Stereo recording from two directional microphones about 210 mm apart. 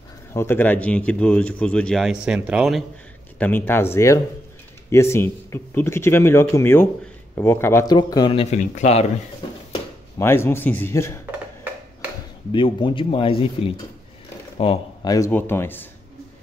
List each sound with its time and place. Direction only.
0.3 s speech: 10° left (ahead or behind)
3.3 s speech: 10° left (ahead or behind); by 9.0 s 35° left (ahead or behind)
10.1 s speech: 10° left (ahead or behind)
12.5 s speech: 25° left (ahead or behind)
15.1 s speech: 10° left (ahead or behind)